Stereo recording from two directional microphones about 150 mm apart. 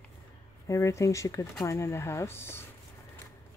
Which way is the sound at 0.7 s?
20° left (ahead or behind).